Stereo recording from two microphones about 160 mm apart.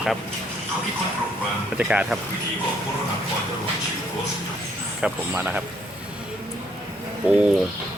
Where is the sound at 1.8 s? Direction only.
5° right (ahead or behind).